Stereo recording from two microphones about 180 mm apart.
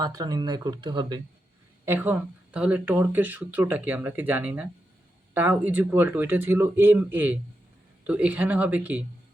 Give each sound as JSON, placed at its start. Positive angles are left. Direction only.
{"t": 0.0, "sound": "speech", "side_deg": -20}
{"t": 1.8, "sound": "speech", "side_deg": -10}